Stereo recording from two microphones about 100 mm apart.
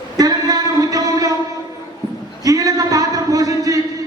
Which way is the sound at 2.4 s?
35° right (ahead or behind).